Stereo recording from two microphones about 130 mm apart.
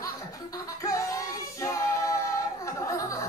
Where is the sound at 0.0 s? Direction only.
25° left (ahead or behind).